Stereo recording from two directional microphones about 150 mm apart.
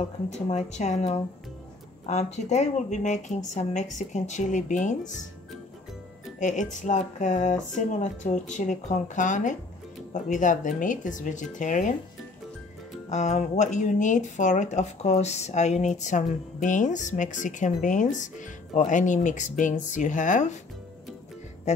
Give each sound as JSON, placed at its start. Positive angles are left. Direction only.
{"t": 0.3, "sound": "speech", "side_deg": 50}
{"t": 6.4, "sound": "speech", "side_deg": 55}
{"t": 13.1, "sound": "speech", "side_deg": 50}